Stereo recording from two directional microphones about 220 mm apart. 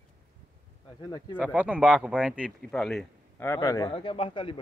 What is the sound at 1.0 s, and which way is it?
Speech, 10° left (ahead or behind).